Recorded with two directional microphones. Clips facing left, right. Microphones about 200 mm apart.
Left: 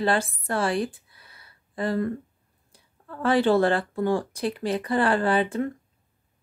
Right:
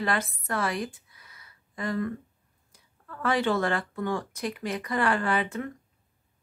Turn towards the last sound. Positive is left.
turn(degrees=30)  # may be behind; listen again after turning